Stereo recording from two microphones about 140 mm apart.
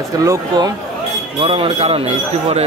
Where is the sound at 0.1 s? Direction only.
25° right (ahead or behind).